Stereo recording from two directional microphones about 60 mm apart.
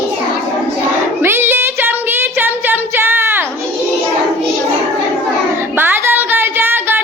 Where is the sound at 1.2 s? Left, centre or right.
Right.